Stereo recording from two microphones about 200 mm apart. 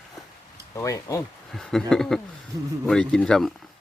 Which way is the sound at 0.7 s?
15° left (ahead or behind).